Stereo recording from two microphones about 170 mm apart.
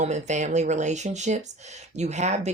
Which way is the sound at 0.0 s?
45° right (ahead or behind).